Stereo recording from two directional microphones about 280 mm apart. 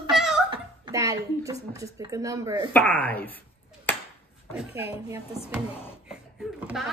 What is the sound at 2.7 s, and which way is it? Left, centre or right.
Speech, centre.